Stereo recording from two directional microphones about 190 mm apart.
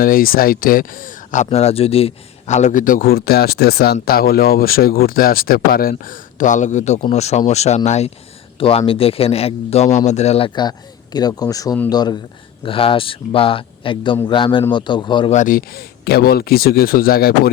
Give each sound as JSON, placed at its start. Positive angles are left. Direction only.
{"t": 0.0, "sound": "a man's voice", "side_deg": 50}
{"t": 15.3, "sound": "speech", "side_deg": 45}